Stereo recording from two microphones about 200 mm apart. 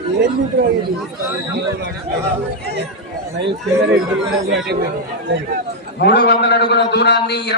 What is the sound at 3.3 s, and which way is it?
Speech, 60° right (ahead or behind).